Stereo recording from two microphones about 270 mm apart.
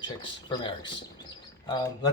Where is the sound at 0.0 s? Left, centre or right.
Centre.